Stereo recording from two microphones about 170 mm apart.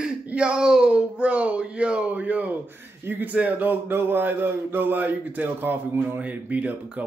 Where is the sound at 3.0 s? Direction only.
10° right (ahead or behind).